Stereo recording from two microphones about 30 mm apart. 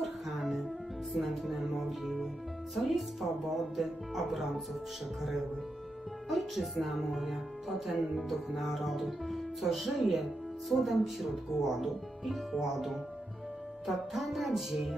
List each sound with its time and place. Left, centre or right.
0.0 s music: centre
2.7 s speech: centre
6.2 s speech: centre